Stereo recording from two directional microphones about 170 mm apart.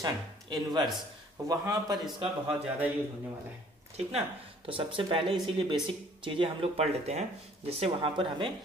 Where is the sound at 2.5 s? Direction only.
10° right (ahead or behind).